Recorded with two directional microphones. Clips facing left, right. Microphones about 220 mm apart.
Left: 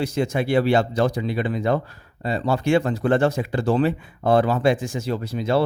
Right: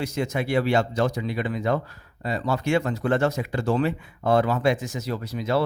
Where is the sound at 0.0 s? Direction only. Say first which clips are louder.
Left 4 dB; 30° left (ahead or behind).